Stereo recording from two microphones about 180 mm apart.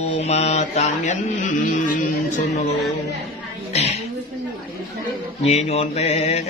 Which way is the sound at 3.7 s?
35° left (ahead or behind).